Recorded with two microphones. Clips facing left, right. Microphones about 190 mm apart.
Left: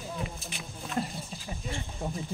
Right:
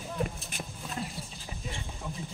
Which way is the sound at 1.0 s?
45° left (ahead or behind).